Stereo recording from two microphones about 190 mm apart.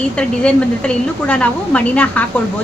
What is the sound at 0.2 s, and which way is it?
A woman's voice, 5° left (ahead or behind).